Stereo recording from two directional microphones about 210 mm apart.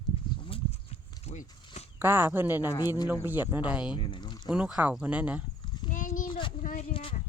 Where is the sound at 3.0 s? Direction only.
10° right (ahead or behind).